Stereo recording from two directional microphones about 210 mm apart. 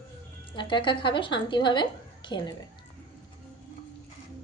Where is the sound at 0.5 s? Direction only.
25° left (ahead or behind).